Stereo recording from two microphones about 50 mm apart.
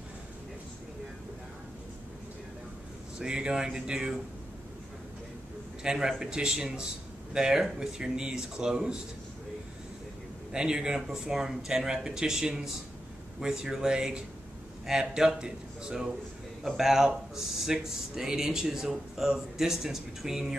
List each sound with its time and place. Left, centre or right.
3.2 s speech: centre
5.8 s speech: centre
10.5 s speech: centre